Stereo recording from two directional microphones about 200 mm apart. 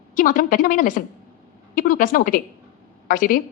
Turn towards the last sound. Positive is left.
turn(degrees=45)  # may be behind; listen again after turning